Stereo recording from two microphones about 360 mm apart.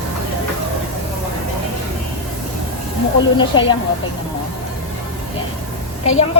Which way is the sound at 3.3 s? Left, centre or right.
Centre.